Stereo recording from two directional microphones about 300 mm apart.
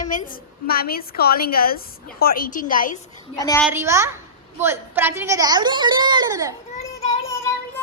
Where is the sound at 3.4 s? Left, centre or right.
Centre.